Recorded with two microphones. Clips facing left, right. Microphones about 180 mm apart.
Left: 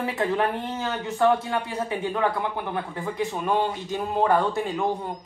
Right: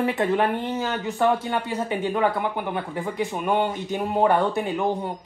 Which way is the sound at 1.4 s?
20° right (ahead or behind).